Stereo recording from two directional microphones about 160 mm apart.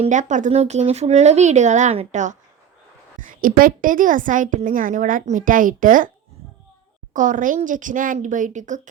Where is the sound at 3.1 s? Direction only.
60° right (ahead or behind).